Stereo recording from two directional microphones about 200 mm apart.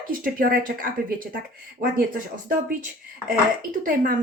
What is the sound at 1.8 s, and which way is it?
Speech, 45° right (ahead or behind).